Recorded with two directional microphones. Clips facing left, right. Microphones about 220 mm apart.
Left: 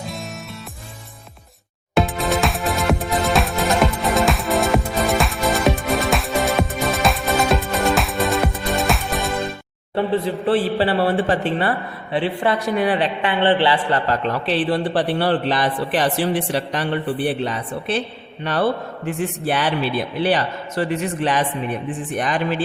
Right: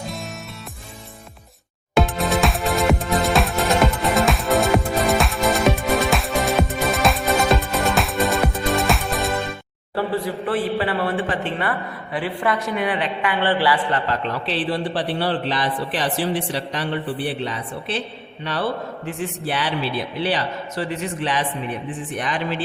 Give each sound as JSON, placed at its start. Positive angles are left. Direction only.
{"t": 2.0, "sound": "music", "side_deg": 0}
{"t": 9.9, "sound": "a man's voice", "side_deg": 20}
{"t": 14.1, "sound": "a man's voice", "side_deg": 50}